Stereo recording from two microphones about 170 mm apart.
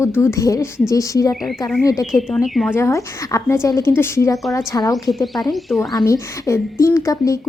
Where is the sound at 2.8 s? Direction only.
20° left (ahead or behind).